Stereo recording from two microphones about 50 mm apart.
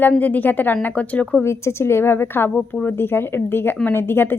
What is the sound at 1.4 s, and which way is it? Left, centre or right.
A woman's voice, left.